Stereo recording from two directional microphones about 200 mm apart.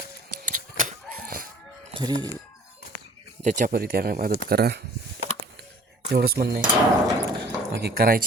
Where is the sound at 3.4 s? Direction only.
40° right (ahead or behind).